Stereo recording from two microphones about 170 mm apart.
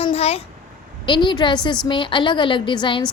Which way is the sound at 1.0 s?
25° left (ahead or behind).